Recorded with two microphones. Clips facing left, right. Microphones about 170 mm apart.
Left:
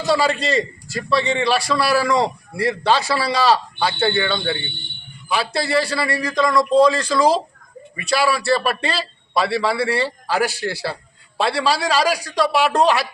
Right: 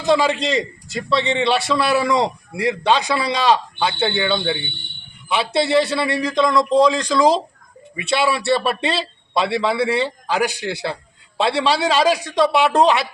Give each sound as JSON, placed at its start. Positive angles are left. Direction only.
{"t": 0.0, "sound": "a man's voice", "side_deg": -20}
{"t": 8.4, "sound": "speech", "side_deg": 0}
{"t": 8.6, "sound": "a man's voice", "side_deg": -20}